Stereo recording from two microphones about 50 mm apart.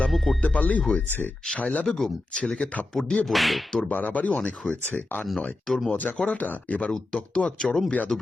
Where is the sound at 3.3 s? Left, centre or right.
Centre.